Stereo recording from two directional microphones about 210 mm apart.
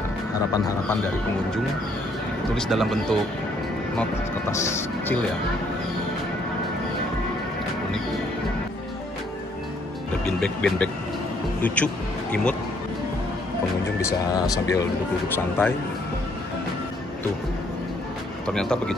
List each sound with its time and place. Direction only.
0.5 s speech: 10° left (ahead or behind)
2.5 s speech: centre (ahead or behind)
4.0 s speech: 15° left (ahead or behind)
10.2 s speech: 5° left (ahead or behind)
14.3 s speech: 15° left (ahead or behind)
18.5 s speech: 5° left (ahead or behind)